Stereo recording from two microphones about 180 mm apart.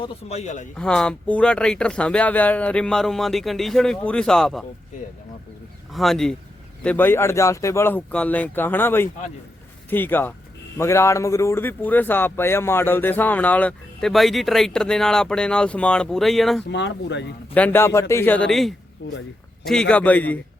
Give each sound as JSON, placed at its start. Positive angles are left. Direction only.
{"t": 0.0, "sound": "speech", "side_deg": 35}
{"t": 0.8, "sound": "speech", "side_deg": 5}
{"t": 5.9, "sound": "speech", "side_deg": 0}
{"t": 16.6, "sound": "speech", "side_deg": 75}
{"t": 17.5, "sound": "speech", "side_deg": 10}
{"t": 19.0, "sound": "speech", "side_deg": 90}
{"t": 19.6, "sound": "speech", "side_deg": 5}